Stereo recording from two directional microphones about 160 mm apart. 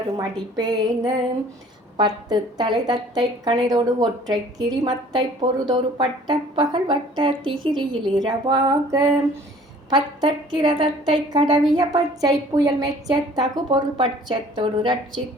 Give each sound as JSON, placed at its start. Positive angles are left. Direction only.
{"t": 0.2, "sound": "a woman's voice", "side_deg": -25}